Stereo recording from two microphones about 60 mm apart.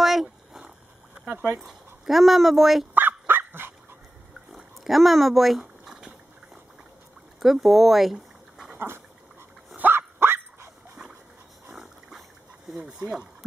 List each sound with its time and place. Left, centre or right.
0.0 s a sound: centre
1.1 s speech: centre
2.0 s speech: centre
2.9 s dog: right
4.5 s pig: centre
7.3 s speech: centre
8.7 s dog: right
9.8 s dog: right
11.7 s a sound: centre
12.7 s speech: centre